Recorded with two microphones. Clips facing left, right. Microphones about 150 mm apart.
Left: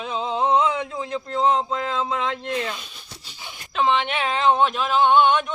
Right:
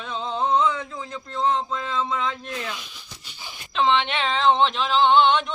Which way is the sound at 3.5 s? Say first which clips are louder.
Even; centre (ahead or behind).